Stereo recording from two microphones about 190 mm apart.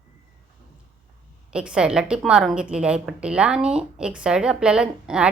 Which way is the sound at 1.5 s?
5° right (ahead or behind).